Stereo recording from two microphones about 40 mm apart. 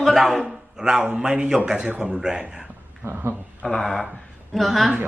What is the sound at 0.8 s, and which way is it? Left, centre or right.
A man's voice, centre.